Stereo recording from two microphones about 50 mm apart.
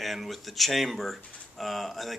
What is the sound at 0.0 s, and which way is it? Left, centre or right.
Speech, centre.